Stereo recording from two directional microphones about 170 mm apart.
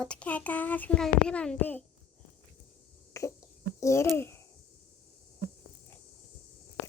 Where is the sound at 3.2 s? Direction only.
20° left (ahead or behind).